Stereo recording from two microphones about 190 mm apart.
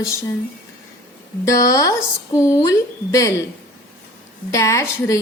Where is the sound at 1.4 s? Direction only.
15° left (ahead or behind).